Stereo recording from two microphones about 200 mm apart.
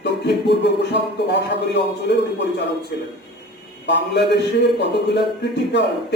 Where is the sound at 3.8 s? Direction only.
60° left (ahead or behind).